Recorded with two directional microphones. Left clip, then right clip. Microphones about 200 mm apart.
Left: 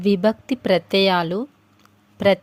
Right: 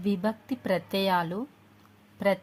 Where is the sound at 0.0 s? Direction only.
35° left (ahead or behind).